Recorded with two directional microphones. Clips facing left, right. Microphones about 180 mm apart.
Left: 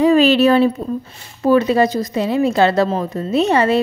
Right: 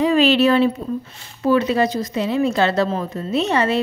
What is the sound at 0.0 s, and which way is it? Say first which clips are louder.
A woman's voice: left 3 dB; 40° left (ahead or behind).